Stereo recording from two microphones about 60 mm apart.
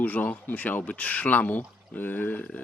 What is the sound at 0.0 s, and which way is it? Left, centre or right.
Speech, left.